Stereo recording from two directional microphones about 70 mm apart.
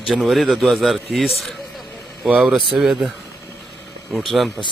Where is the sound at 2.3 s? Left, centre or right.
Centre.